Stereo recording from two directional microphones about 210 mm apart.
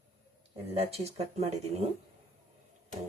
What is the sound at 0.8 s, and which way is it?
Speech, 30° right (ahead or behind).